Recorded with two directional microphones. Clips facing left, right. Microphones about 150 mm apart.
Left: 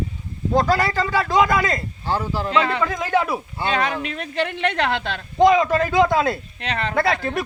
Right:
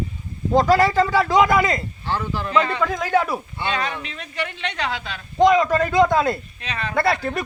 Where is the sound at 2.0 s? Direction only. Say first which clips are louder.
Left 4 dB; 40° left (ahead or behind).